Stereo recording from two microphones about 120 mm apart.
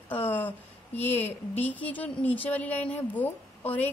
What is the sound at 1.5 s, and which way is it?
Speech, 15° left (ahead or behind).